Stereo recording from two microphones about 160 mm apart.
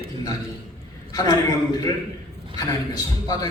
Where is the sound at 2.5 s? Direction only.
25° left (ahead or behind).